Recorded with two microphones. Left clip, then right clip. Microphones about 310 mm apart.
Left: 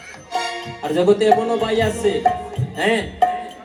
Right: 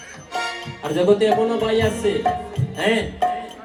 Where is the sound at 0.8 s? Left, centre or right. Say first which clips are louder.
Left 1 dB; centre.